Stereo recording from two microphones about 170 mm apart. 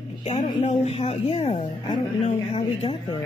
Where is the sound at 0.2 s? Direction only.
40° left (ahead or behind).